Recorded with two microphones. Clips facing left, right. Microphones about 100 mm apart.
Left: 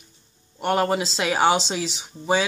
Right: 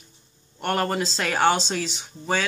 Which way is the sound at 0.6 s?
5° left (ahead or behind).